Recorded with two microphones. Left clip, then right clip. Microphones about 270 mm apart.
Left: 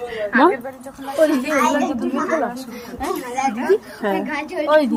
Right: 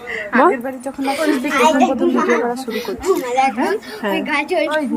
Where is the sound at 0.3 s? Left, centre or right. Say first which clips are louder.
Right 2 dB; right.